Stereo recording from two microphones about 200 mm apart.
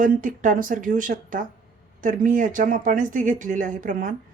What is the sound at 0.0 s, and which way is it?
Speech, 40° right (ahead or behind).